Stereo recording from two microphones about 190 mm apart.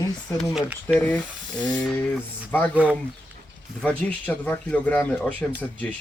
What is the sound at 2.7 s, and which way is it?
Speech, 10° right (ahead or behind).